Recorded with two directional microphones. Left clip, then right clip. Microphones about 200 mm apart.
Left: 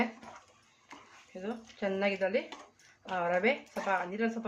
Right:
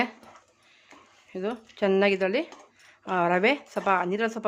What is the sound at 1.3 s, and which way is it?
Speech, 65° right (ahead or behind).